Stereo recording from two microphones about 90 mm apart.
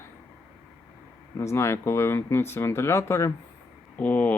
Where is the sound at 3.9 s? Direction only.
15° left (ahead or behind).